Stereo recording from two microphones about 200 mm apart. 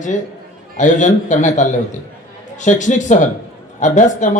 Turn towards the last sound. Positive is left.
turn(degrees=40)  # may be behind; listen again after turning